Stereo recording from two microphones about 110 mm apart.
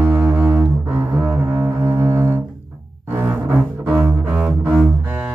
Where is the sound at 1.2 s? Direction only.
25° right (ahead or behind).